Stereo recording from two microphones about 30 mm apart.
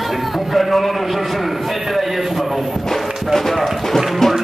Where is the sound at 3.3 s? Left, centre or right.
Centre.